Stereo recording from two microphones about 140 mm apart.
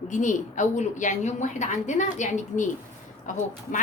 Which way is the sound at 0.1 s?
65° left (ahead or behind).